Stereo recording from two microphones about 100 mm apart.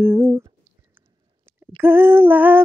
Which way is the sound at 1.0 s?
20° right (ahead or behind).